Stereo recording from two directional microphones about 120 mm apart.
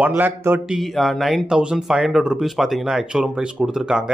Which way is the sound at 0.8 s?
Centre (ahead or behind).